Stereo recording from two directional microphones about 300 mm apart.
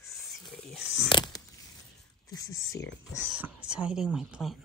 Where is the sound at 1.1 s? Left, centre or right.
Centre.